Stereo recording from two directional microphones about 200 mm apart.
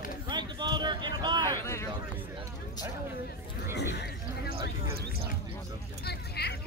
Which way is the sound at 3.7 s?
55° left (ahead or behind).